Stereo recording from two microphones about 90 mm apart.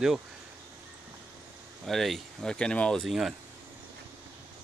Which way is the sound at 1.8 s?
Centre (ahead or behind).